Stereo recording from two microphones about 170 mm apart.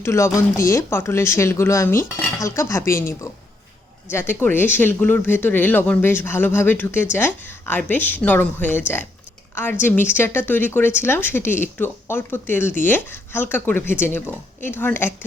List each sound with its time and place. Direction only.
0.0 s speech: 15° left (ahead or behind)